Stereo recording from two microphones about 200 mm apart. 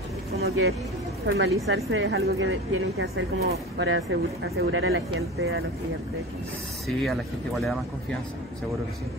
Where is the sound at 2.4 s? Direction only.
90° right.